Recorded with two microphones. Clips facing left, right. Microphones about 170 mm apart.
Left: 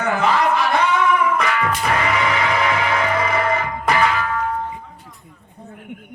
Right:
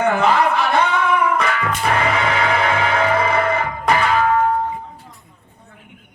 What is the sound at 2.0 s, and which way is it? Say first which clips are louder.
Music: right 1 dB; 30° right (ahead or behind).